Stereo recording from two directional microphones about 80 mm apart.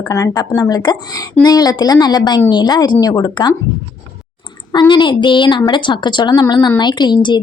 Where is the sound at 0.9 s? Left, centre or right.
Left.